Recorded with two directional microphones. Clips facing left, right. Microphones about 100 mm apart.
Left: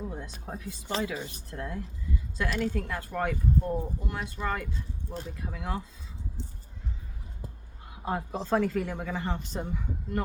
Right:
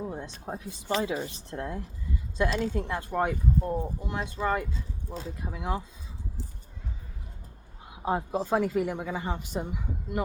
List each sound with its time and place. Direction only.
0.0 s a sound: 25° right (ahead or behind)
0.4 s speech: 20° right (ahead or behind)
7.9 s speech: 20° right (ahead or behind)